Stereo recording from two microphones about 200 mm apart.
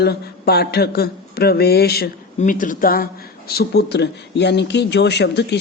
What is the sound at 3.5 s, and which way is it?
Speech, 55° left (ahead or behind).